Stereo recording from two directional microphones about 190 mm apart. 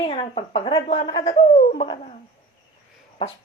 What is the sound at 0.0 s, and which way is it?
A woman's voice, 30° left (ahead or behind).